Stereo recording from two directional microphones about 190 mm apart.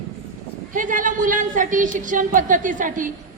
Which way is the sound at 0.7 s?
45° right (ahead or behind).